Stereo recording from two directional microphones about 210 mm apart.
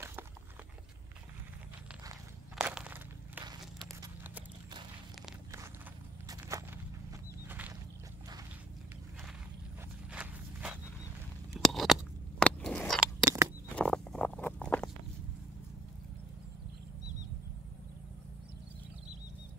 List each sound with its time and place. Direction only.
2.5 s walk: 5° right (ahead or behind)
4.0 s horse: 10° right (ahead or behind)
6.2 s walk: 15° right (ahead or behind)
7.4 s boat: 10° right (ahead or behind)
10.1 s walk: 5° right (ahead or behind)
11.6 s a sound: centre (ahead or behind)
13.2 s a sound: 15° right (ahead or behind)
13.7 s patter: 5° left (ahead or behind)